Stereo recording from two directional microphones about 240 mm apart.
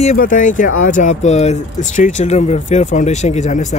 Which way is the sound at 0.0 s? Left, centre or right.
Left.